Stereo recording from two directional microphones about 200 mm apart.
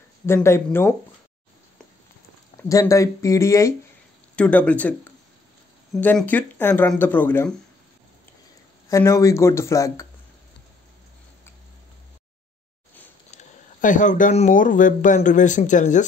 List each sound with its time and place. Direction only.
0.3 s speech: 10° left (ahead or behind)
2.7 s speech: 15° left (ahead or behind)
5.9 s speech: 10° left (ahead or behind)
8.8 s speech: 15° left (ahead or behind)
13.4 s speech: 40° left (ahead or behind)